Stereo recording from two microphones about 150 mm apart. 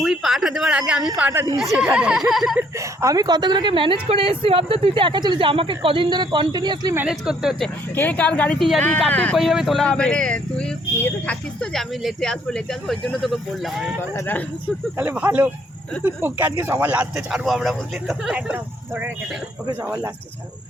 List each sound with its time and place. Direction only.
0.0 s a sound: centre (ahead or behind)
1.3 s speech: 15° right (ahead or behind)
1.5 s speech: 5° right (ahead or behind)
2.6 s a woman's voice: 20° right (ahead or behind)
7.1 s speech: 5° right (ahead or behind)
7.9 s a woman's voice: 10° left (ahead or behind)
9.4 s speech: centre (ahead or behind)
14.2 s a woman's voice: 15° left (ahead or behind)
14.9 s speech: 10° right (ahead or behind)